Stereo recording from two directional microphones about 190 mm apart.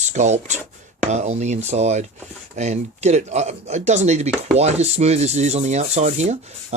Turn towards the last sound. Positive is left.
turn(degrees=-35)  # may be behind; listen again after turning